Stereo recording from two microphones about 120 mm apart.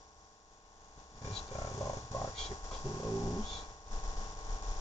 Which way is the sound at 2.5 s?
30° left (ahead or behind).